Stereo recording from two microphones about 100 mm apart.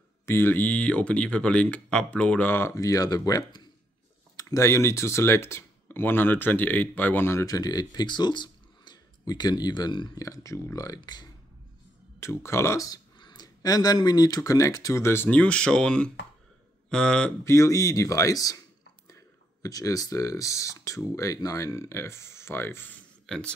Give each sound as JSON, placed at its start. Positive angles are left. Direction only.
{"t": 0.3, "sound": "speech", "side_deg": 20}
{"t": 2.7, "sound": "speech", "side_deg": 35}
{"t": 7.4, "sound": "speech", "side_deg": 40}
{"t": 12.2, "sound": "speech", "side_deg": 30}
{"t": 17.5, "sound": "speech", "side_deg": 30}
{"t": 23.2, "sound": "speech", "side_deg": 5}